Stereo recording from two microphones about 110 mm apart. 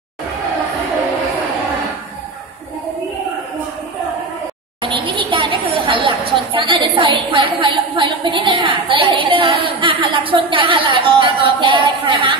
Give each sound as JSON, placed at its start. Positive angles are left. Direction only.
{"t": 4.8, "sound": "speech", "side_deg": -50}